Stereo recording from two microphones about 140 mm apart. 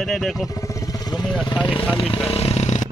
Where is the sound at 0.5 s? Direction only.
25° left (ahead or behind).